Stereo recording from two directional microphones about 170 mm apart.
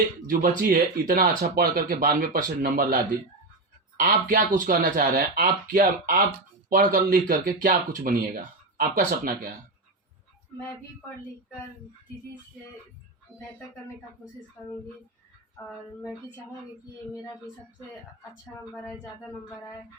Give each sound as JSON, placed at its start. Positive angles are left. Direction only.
{"t": 0.3, "sound": "speech", "side_deg": -55}
{"t": 14.6, "sound": "a child's voice", "side_deg": 10}
{"t": 18.7, "sound": "speech", "side_deg": 5}